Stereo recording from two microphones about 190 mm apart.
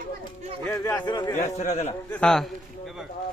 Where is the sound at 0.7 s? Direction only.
20° left (ahead or behind).